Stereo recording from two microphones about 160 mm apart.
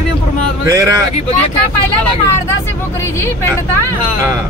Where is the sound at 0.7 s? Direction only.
20° right (ahead or behind).